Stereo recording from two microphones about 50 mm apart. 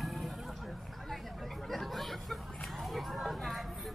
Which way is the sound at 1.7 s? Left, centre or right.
Centre.